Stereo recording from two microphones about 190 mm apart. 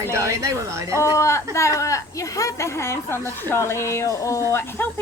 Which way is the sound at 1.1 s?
15° left (ahead or behind).